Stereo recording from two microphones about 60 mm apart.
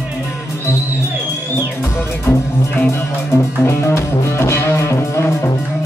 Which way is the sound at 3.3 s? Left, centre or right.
Left.